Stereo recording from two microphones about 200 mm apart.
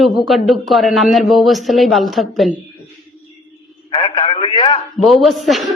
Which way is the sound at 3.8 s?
25° left (ahead or behind).